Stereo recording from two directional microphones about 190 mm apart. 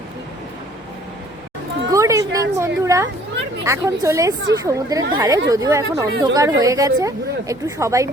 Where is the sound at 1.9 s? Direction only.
15° right (ahead or behind).